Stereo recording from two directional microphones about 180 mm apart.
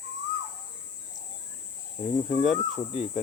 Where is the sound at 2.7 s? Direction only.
35° left (ahead or behind).